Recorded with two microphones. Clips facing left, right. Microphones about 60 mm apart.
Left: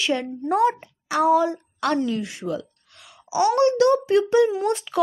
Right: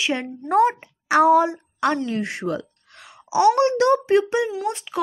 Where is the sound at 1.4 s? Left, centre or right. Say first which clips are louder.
Right 2 dB; right.